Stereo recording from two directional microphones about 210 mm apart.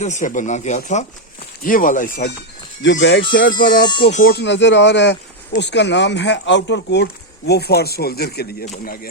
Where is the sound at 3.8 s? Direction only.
20° left (ahead or behind).